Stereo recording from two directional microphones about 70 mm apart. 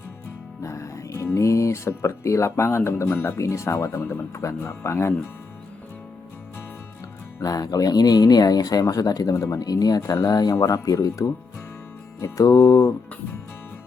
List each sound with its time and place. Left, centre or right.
0.6 s music: left
1.4 s speech: left
7.4 s speech: left
12.4 s speech: left